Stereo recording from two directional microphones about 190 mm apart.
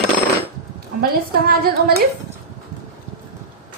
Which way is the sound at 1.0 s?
55° right (ahead or behind).